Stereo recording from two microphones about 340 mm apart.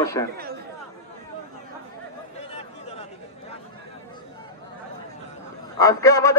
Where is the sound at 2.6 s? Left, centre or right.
Centre.